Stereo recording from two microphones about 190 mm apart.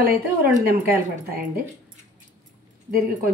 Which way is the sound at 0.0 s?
50° right (ahead or behind).